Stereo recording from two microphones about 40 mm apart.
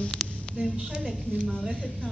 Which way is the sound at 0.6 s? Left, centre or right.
Centre.